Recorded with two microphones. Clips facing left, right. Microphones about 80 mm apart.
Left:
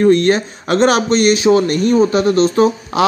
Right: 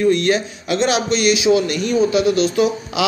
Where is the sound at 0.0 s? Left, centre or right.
Left.